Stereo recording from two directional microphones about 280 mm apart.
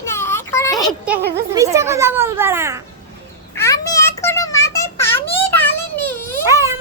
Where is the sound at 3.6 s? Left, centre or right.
Centre.